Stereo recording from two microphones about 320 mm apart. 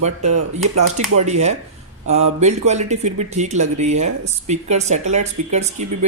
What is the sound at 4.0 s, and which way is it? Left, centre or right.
Speech, right.